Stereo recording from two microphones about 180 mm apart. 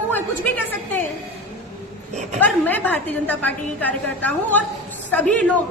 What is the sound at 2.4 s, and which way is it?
A woman's voice, 10° left (ahead or behind).